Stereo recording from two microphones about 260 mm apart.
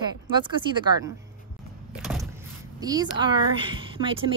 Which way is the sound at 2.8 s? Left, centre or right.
Centre.